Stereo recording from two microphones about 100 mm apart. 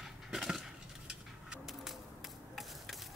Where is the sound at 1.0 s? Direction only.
5° right (ahead or behind).